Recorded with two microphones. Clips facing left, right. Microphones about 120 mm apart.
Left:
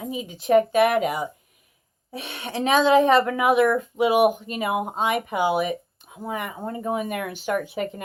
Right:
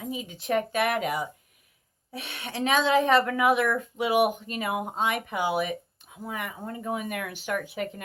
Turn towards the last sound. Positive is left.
turn(degrees=25)  # may be behind; listen again after turning